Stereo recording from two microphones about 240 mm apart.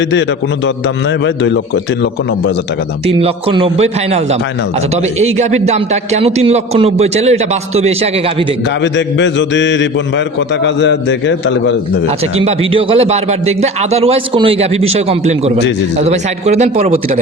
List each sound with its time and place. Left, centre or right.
3.1 s a man's voice: right
8.8 s mantra: left
12.4 s a man's voice: right